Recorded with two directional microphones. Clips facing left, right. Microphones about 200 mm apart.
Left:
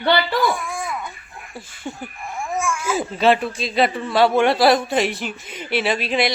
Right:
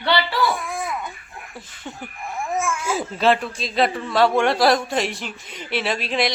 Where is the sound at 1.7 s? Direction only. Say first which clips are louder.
Left 6 dB; 10° left (ahead or behind).